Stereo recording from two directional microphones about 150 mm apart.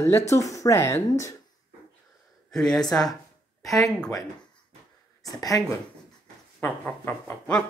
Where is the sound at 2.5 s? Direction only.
5° left (ahead or behind).